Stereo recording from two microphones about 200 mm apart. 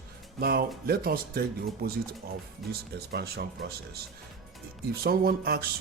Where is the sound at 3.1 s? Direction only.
50° right (ahead or behind).